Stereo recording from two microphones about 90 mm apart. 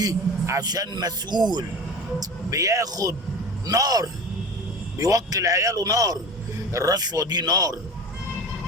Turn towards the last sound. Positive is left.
turn(degrees=-45)  # may be behind; listen again after turning